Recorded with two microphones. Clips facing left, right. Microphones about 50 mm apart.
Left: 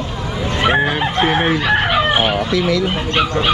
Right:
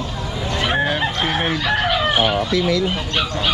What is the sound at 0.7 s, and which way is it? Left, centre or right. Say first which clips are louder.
Chicken: left 4 dB; centre.